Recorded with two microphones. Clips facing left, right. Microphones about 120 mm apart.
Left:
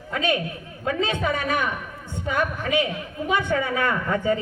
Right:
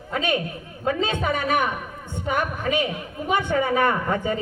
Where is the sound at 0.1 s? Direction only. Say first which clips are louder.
Even; 20° right (ahead or behind).